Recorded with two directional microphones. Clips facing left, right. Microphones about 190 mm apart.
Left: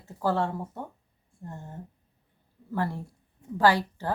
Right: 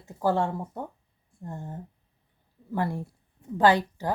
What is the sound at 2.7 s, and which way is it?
Speech, 15° right (ahead or behind).